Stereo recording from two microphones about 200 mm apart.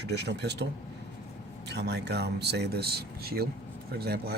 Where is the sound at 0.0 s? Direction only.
55° right (ahead or behind).